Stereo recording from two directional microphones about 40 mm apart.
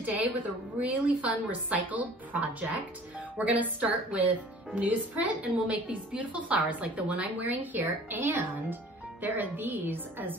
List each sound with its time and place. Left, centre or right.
0.0 s a woman's voice: right